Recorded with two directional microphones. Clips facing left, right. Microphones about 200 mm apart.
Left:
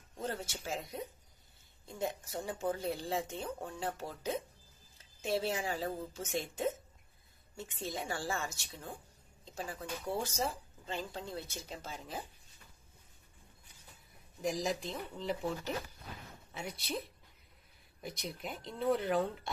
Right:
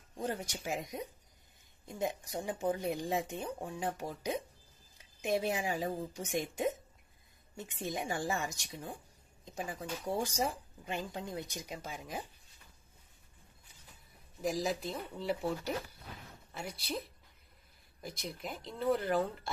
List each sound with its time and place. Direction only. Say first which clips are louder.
0.2 s speech: right 2 dB; 15° right (ahead or behind)
14.4 s speech: right 1 dB; centre (ahead or behind)
18.0 s speech: even; centre (ahead or behind)